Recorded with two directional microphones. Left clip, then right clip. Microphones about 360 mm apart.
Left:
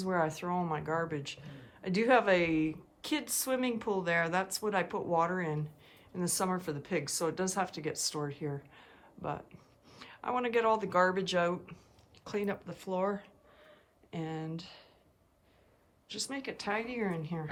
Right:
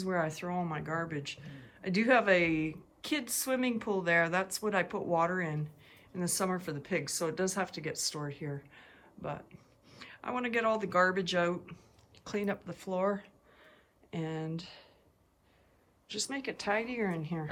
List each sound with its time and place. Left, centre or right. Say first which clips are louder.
0.0 s speech: left 1 dB; centre
16.0 s speech: right 2 dB; centre